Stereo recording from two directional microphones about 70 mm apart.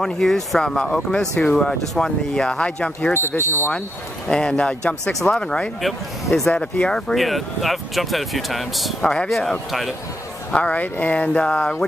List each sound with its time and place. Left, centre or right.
0.0 s speech: centre
4.3 s speech: centre
5.8 s speech: centre
7.2 s speech: centre
9.7 s speech: centre
10.5 s speech: left